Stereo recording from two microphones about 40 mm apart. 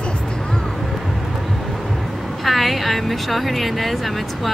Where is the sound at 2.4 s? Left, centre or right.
Centre.